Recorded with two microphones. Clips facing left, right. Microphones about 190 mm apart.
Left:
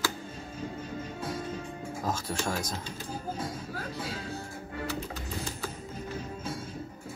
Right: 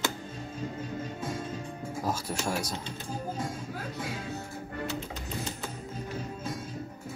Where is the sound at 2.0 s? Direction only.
10° right (ahead or behind).